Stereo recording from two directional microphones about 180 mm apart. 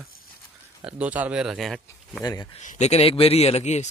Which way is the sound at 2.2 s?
20° left (ahead or behind).